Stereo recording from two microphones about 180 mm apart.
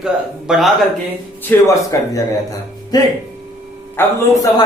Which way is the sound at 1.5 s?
10° left (ahead or behind).